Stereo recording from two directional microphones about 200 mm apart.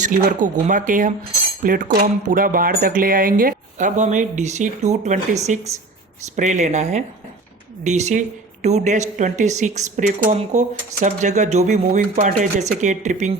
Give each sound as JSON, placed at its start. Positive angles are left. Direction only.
{"t": 0.0, "sound": "speech", "side_deg": -40}